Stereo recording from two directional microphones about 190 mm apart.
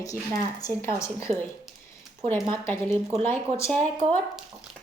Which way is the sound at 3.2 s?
10° left (ahead or behind).